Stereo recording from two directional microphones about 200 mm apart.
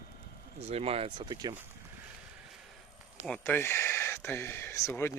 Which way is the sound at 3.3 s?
10° left (ahead or behind).